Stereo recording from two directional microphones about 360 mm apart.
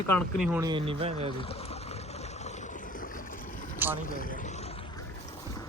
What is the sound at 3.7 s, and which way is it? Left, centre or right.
Vehicle, centre.